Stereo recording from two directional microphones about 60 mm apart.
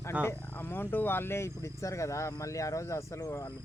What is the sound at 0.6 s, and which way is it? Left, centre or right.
Speech, left.